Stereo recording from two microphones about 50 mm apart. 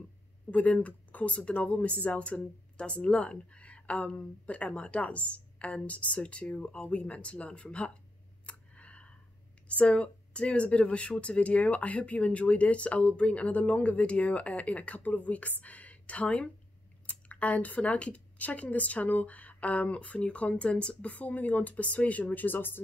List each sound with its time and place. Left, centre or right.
0.5 s speech: left
8.5 s clicking: left
9.7 s speech: left
21.1 s speech: left